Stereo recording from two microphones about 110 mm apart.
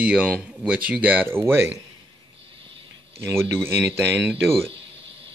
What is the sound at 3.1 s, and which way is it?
Speech, 25° right (ahead or behind).